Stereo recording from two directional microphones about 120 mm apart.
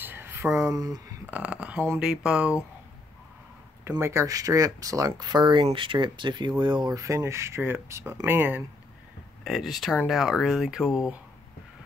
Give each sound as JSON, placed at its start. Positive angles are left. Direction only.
{"t": 0.0, "sound": "a sound", "side_deg": -15}
{"t": 1.2, "sound": "speech", "side_deg": -10}
{"t": 4.0, "sound": "speech", "side_deg": -25}
{"t": 9.4, "sound": "speech", "side_deg": -5}